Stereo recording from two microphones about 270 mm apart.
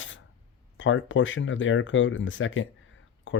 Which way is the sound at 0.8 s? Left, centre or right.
Left.